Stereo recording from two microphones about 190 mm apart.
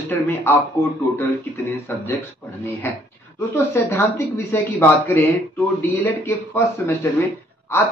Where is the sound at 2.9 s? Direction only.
10° left (ahead or behind).